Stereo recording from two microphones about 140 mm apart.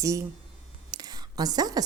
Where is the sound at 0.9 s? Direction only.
30° right (ahead or behind).